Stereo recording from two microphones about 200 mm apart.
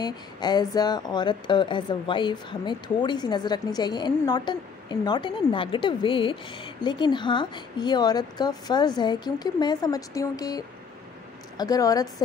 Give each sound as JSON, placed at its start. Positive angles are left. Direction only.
{"t": 0.0, "sound": "a woman's voice", "side_deg": 20}